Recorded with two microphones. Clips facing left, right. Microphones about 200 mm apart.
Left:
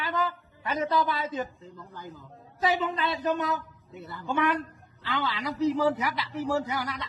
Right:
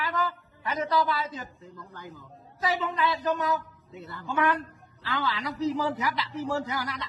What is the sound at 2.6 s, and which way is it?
A man's voice, 20° left (ahead or behind).